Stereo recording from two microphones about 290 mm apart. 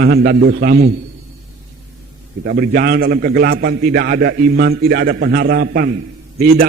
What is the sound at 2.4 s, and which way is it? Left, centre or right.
A man's voice, right.